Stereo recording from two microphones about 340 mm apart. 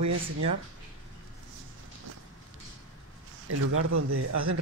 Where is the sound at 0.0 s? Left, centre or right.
Right.